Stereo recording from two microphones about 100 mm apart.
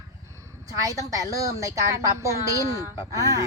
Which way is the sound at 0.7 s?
35° right (ahead or behind).